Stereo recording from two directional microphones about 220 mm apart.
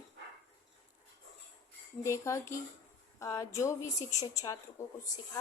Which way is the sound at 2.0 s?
15° left (ahead or behind).